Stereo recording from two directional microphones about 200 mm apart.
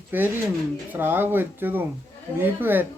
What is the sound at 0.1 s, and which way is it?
Speech, 10° right (ahead or behind).